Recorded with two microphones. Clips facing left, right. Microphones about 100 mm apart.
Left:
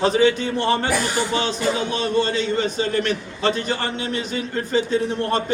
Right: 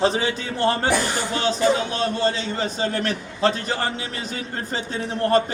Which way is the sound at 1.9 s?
35° right (ahead or behind).